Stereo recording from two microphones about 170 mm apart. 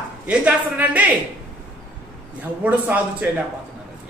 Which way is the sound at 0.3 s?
10° right (ahead or behind).